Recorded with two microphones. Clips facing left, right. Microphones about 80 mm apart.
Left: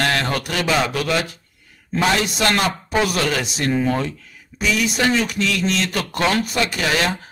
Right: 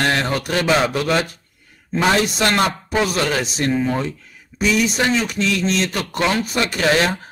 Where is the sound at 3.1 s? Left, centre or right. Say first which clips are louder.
Right 1 dB; right.